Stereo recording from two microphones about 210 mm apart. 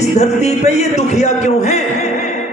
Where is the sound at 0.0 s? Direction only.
30° left (ahead or behind).